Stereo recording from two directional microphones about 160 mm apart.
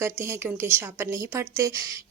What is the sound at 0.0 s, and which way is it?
A woman's voice, 15° right (ahead or behind).